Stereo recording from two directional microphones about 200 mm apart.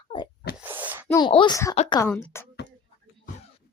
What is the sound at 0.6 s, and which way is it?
Wail, 10° right (ahead or behind).